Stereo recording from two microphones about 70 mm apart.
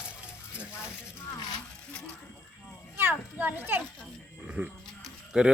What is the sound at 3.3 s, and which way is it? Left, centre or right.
A child's voice, right.